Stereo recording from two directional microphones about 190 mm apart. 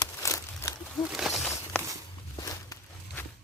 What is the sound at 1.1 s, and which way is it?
Speech, centre (ahead or behind).